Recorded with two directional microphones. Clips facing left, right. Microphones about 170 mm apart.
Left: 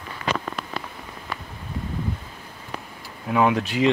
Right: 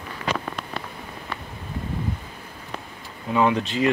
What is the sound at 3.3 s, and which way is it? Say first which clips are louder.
Speech: even; 10° left (ahead or behind).